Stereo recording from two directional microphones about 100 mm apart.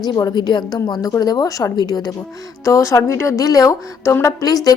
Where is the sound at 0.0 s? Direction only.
40° left (ahead or behind).